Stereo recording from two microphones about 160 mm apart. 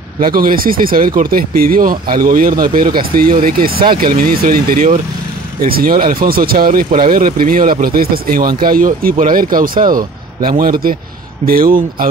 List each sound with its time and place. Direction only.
0.2 s speech: 65° right (ahead or behind)